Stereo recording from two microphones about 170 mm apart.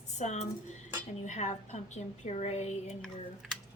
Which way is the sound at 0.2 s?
45° left (ahead or behind).